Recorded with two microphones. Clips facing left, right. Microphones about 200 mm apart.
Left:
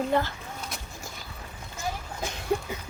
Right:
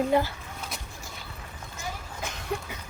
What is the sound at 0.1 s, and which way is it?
Speech, 10° right (ahead or behind).